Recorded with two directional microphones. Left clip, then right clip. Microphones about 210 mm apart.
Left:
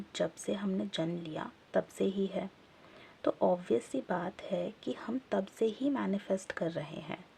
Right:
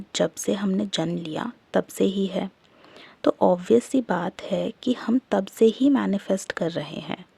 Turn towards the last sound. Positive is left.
turn(degrees=-40)  # may be behind; listen again after turning